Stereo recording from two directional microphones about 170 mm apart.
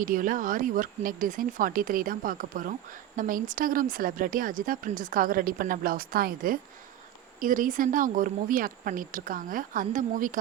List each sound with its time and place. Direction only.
0.0 s a woman's voice: 50° right (ahead or behind)